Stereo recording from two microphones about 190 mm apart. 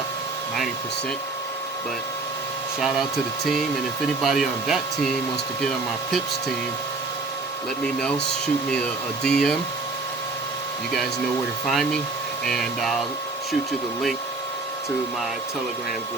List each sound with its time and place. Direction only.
2.8 s speech: centre (ahead or behind)
9.2 s speech: 5° left (ahead or behind)
11.6 s speech: centre (ahead or behind)